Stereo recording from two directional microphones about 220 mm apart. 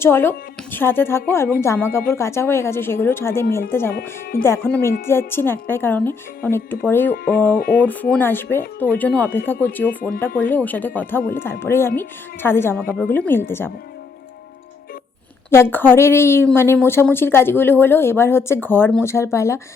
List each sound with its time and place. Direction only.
0.0 s a woman's voice: 10° left (ahead or behind)
3.9 s speech: 40° left (ahead or behind)
4.4 s a woman's voice: 10° left (ahead or behind)
15.4 s a woman's voice: 10° left (ahead or behind)